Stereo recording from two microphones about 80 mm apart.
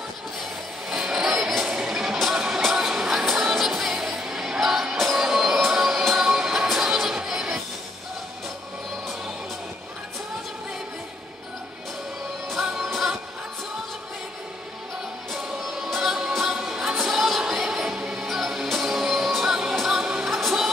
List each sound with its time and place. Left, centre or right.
0.8 s music: centre
12.4 s music: centre
15.3 s music: centre